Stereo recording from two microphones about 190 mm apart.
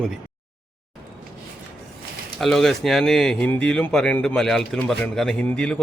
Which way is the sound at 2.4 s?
Centre (ahead or behind).